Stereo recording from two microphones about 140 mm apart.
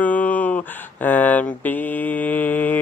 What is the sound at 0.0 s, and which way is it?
Mantra, 10° left (ahead or behind).